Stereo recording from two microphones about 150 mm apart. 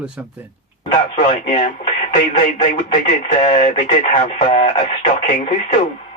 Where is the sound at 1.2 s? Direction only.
50° left (ahead or behind).